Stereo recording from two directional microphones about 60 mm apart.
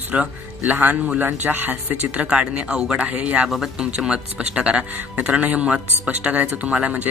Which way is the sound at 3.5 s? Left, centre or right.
Centre.